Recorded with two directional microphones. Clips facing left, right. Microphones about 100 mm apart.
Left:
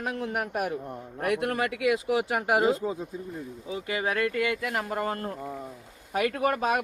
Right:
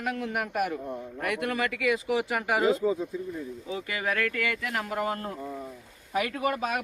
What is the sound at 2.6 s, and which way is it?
Speech, 30° left (ahead or behind).